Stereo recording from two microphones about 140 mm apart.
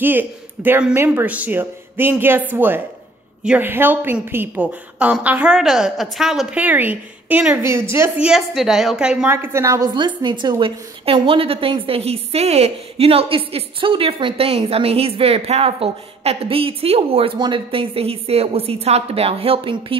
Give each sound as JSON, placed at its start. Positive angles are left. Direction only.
{"t": 0.0, "sound": "a woman's voice", "side_deg": -15}
{"t": 8.3, "sound": "a woman's voice", "side_deg": 0}
{"t": 9.9, "sound": "a woman's voice", "side_deg": -35}